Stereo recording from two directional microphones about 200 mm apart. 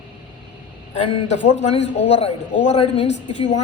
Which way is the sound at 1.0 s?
35° left (ahead or behind).